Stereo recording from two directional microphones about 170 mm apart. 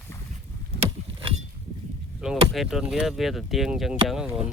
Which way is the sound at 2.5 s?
Centre (ahead or behind).